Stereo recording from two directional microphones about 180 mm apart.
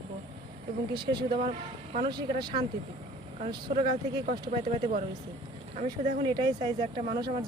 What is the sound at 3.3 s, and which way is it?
Speech, 35° right (ahead or behind).